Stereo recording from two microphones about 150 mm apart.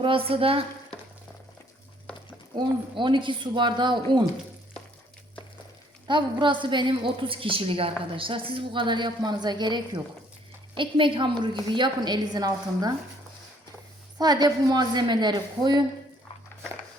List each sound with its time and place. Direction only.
0.0 s a woman's voice: 35° right (ahead or behind)
2.6 s a woman's voice: 30° right (ahead or behind)
6.1 s a woman's voice: 30° right (ahead or behind)
14.2 s a woman's voice: 25° right (ahead or behind)